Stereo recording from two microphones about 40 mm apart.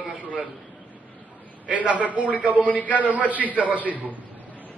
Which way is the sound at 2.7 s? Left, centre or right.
Left.